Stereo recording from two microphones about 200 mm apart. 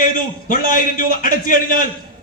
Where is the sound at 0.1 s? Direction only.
45° left (ahead or behind).